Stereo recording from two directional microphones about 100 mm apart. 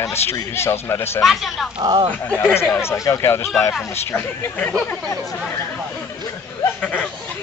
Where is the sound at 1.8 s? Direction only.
45° right (ahead or behind).